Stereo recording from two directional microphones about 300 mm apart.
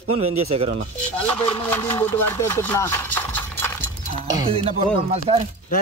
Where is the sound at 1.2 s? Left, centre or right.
Centre.